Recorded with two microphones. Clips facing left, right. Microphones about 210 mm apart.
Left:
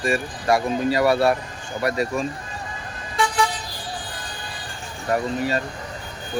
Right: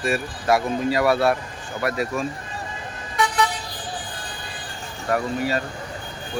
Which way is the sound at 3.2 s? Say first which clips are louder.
Even; 30° left (ahead or behind).